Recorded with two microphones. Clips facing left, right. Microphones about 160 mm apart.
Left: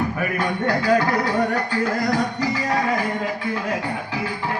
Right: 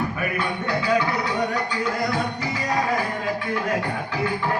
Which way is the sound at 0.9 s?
40° left (ahead or behind).